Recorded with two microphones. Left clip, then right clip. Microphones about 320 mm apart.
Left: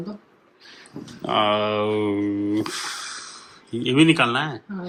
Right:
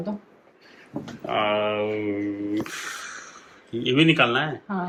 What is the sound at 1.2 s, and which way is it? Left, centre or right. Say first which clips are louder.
Speech: left 3 dB; centre.